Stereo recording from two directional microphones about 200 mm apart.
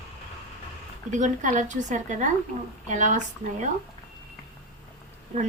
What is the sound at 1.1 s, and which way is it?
A woman's voice, 35° right (ahead or behind).